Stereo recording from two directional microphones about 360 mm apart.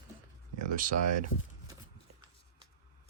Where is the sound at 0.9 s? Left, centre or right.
Right.